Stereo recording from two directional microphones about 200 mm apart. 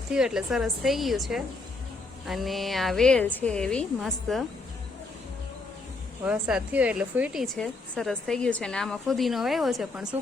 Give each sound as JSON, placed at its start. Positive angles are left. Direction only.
{"t": 0.1, "sound": "a woman's voice", "side_deg": -5}
{"t": 6.2, "sound": "a woman's voice", "side_deg": -5}